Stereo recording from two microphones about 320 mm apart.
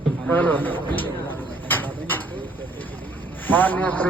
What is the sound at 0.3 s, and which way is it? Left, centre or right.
Speech, centre.